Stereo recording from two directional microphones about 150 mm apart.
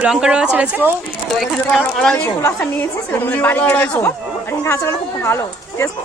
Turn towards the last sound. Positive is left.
turn(degrees=15)  # may be behind; listen again after turning